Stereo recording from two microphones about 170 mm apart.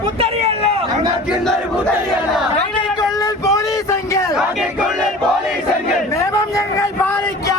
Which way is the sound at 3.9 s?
15° left (ahead or behind).